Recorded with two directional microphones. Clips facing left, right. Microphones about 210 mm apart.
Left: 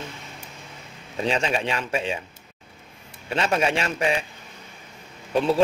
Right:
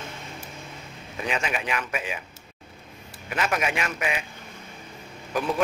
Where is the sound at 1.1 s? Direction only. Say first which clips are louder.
Left 5 dB; 30° left (ahead or behind).